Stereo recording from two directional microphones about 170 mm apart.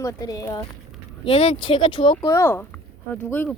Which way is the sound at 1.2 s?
35° left (ahead or behind).